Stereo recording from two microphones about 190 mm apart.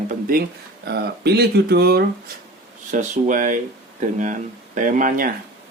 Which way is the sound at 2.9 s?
40° right (ahead or behind).